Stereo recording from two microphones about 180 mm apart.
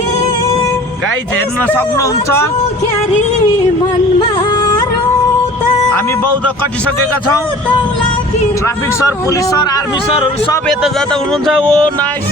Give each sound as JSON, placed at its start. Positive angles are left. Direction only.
{"t": 1.6, "sound": "speech", "side_deg": 10}
{"t": 4.2, "sound": "music", "side_deg": 25}
{"t": 8.6, "sound": "speech", "side_deg": 15}
{"t": 10.2, "sound": "speech", "side_deg": 30}
{"t": 10.7, "sound": "speech", "side_deg": 0}